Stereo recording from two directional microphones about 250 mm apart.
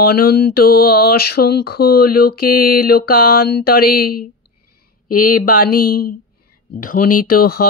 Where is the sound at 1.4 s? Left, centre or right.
Left.